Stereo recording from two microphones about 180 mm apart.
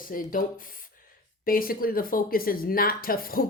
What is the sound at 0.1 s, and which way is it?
A woman's voice, 50° left (ahead or behind).